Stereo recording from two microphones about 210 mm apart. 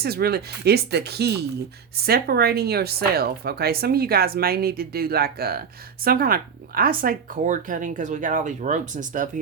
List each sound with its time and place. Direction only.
0.0 s speech: 50° right (ahead or behind)